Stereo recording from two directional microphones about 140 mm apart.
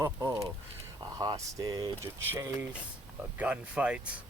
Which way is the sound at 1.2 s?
25° right (ahead or behind).